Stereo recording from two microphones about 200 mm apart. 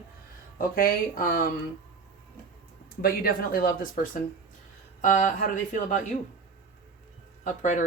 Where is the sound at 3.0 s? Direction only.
50° left (ahead or behind).